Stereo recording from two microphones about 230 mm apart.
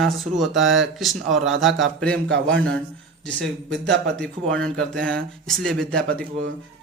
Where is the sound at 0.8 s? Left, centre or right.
Centre.